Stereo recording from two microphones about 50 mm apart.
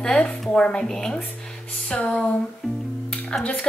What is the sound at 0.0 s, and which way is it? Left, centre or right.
A woman's voice, centre.